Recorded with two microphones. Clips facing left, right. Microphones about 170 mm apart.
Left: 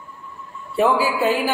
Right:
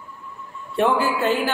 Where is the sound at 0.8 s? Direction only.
5° left (ahead or behind).